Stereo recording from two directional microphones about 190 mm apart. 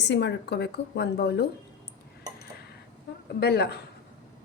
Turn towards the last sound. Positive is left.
turn(degrees=60)  # may be behind; listen again after turning